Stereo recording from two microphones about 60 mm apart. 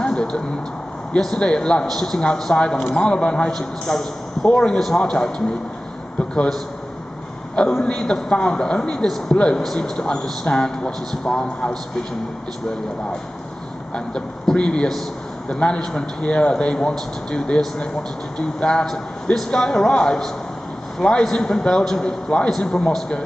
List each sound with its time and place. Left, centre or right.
0.0 s a sound: centre
1.2 s a man's voice: centre
6.3 s a man's voice: centre
13.9 s a man's voice: centre